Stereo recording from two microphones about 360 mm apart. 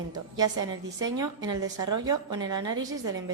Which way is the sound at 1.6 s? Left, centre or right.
Right.